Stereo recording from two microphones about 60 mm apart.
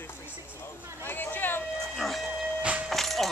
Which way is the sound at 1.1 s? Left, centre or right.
Left.